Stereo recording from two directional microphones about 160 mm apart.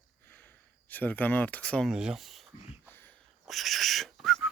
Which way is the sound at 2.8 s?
15° left (ahead or behind).